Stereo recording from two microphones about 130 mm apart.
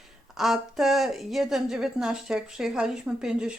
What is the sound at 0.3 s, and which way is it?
A woman's voice, 5° right (ahead or behind).